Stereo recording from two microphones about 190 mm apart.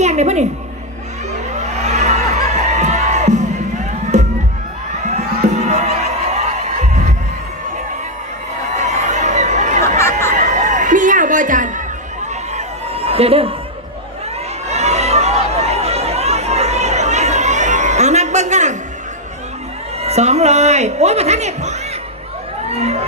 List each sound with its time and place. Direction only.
0.0 s a woman's voice: 35° right (ahead or behind)
1.5 s music: 35° right (ahead or behind)
4.1 s crowd: 40° right (ahead or behind)
5.5 s music: 35° right (ahead or behind)
8.8 s crowd: 40° right (ahead or behind)
10.0 s a sound: 15° left (ahead or behind)
10.2 s a sound: 40° right (ahead or behind)
12.5 s chicken: 30° right (ahead or behind)
14.7 s chatter: 35° right (ahead or behind)
20.0 s speech: 35° right (ahead or behind)
22.7 s a sound: 35° right (ahead or behind)